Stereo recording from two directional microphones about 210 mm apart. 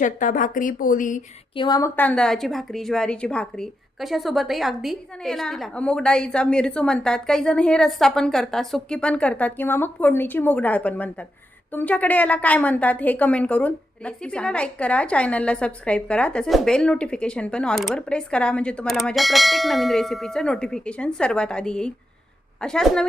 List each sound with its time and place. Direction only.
0.0 s a woman's voice: 40° left (ahead or behind)
1.5 s a woman's voice: 20° left (ahead or behind); by 23.0 s 5° left (ahead or behind)